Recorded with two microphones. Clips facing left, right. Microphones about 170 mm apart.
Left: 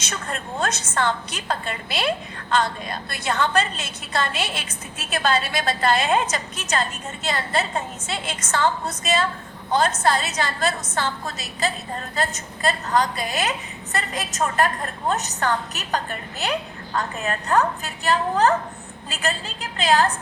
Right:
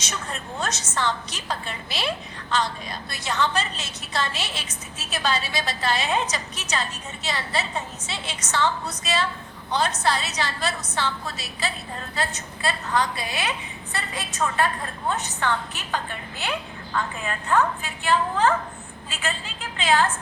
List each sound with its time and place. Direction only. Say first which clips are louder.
0.6 s a woman's voice: left 3 dB; 55° left (ahead or behind); by 20.1 s 40° left (ahead or behind)